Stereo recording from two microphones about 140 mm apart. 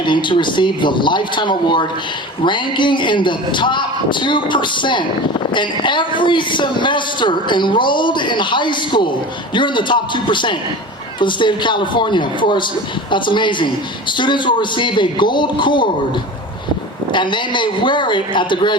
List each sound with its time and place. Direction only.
0.0 s a man's voice: 35° left (ahead or behind)
17.1 s a man's voice: 35° left (ahead or behind)